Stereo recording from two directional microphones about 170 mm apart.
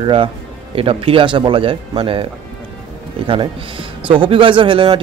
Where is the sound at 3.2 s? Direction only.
30° right (ahead or behind).